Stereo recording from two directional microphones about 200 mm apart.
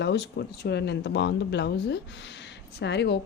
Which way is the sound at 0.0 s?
60° left (ahead or behind).